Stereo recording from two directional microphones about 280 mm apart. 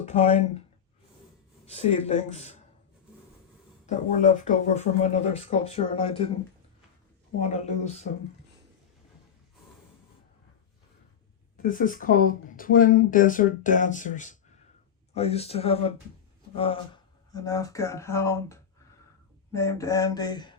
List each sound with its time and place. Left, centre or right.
0.0 s speech: left
1.7 s speech: left
3.8 s speech: left
7.3 s speech: left
11.5 s speech: left; by 18.6 s centre
19.5 s a sound: centre